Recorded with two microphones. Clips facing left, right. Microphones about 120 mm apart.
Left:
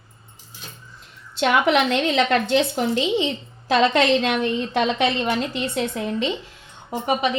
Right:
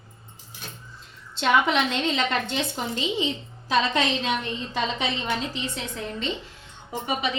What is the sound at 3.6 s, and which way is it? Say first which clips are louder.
A woman's voice: left 6 dB; 75° left (ahead or behind).